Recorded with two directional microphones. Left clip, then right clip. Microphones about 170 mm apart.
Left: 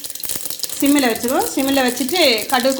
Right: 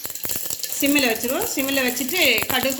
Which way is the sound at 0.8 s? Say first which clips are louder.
Left 3 dB; 40° left (ahead or behind).